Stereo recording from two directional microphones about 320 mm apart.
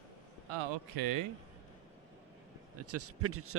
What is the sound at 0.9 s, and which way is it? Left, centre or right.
Speech, right.